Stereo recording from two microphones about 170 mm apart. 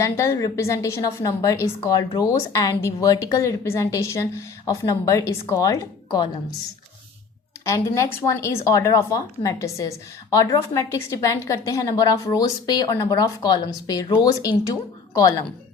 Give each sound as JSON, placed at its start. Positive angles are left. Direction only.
{"t": 0.0, "sound": "a woman's voice", "side_deg": 20}
{"t": 7.6, "sound": "a woman's voice", "side_deg": 20}